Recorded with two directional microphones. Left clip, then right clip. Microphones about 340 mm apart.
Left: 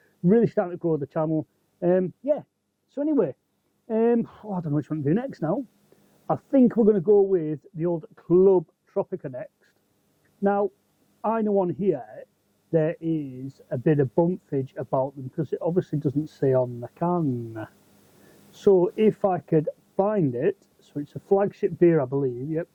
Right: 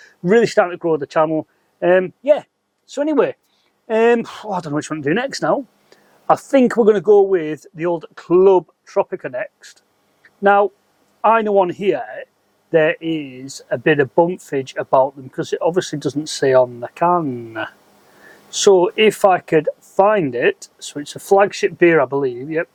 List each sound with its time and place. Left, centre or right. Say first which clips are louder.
0.3 s speech: right 8 dB; centre
18.8 s speech: right 8 dB; centre